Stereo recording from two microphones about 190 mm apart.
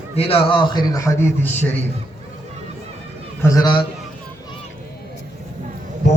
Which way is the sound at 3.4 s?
20° left (ahead or behind).